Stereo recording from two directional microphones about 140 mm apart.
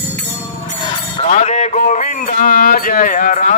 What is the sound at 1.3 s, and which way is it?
A man's voice, 55° left (ahead or behind).